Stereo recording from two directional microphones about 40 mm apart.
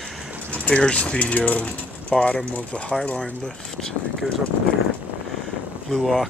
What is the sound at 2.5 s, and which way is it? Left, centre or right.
Speech, left.